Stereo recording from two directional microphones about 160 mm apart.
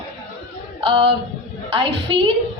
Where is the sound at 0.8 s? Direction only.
35° right (ahead or behind).